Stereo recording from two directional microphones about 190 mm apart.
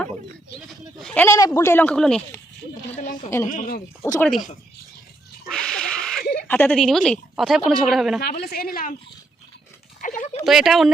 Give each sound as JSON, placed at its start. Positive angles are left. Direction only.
{"t": 0.9, "sound": "speech", "side_deg": 5}
{"t": 3.2, "sound": "speech", "side_deg": 15}
{"t": 3.5, "sound": "a woman's voice", "side_deg": 45}
{"t": 4.2, "sound": "a woman's voice", "side_deg": 0}
{"t": 5.5, "sound": "a sound", "side_deg": 5}
{"t": 6.5, "sound": "a woman's voice", "side_deg": 5}
{"t": 8.2, "sound": "a woman's voice", "side_deg": 55}
{"t": 10.0, "sound": "a sound", "side_deg": 45}
{"t": 10.4, "sound": "a woman's voice", "side_deg": 0}